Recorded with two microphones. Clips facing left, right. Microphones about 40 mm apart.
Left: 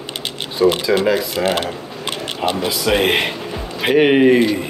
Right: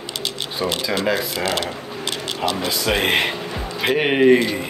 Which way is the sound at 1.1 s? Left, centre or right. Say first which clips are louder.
Left 4 dB; left.